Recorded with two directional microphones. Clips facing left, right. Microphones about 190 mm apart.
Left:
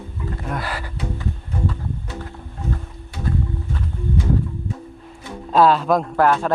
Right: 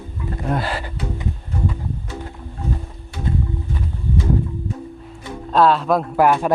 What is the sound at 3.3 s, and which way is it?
Music, 20° right (ahead or behind).